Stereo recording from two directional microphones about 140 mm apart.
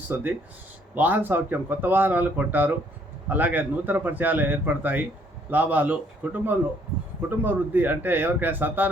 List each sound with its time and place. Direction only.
0.1 s speech: 15° right (ahead or behind)